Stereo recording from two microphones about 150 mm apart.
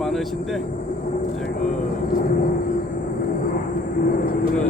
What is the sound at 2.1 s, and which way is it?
Vehicle, 65° left (ahead or behind).